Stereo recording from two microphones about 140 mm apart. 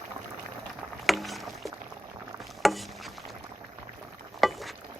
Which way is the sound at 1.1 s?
Centre (ahead or behind).